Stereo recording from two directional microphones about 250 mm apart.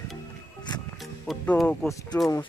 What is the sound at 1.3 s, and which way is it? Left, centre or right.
Speech, centre.